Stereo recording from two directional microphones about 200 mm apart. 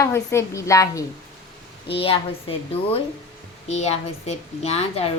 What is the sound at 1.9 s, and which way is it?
A woman's voice, 25° left (ahead or behind).